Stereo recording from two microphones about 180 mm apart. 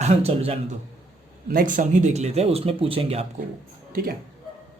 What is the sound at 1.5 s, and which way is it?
Speech, 50° right (ahead or behind).